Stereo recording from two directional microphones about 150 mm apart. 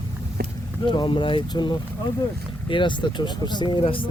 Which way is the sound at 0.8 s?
30° left (ahead or behind).